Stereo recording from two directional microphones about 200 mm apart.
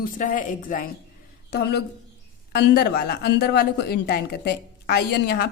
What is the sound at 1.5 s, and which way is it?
Speech, 55° left (ahead or behind).